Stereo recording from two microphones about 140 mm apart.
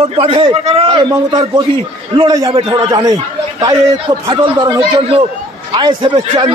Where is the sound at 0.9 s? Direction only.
30° right (ahead or behind).